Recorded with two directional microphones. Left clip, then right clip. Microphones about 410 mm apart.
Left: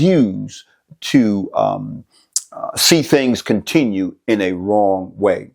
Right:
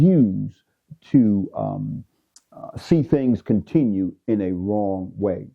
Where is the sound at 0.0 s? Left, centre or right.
Centre.